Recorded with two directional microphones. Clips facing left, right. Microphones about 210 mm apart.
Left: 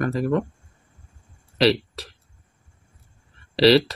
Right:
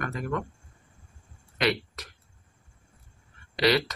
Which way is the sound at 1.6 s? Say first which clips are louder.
Left 8 dB; 30° left (ahead or behind).